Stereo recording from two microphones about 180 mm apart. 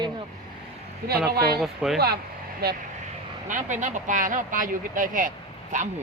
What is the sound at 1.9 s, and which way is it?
Speech, 60° right (ahead or behind).